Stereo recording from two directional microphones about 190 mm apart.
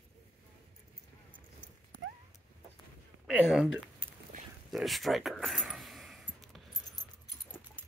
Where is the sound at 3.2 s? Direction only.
5° right (ahead or behind).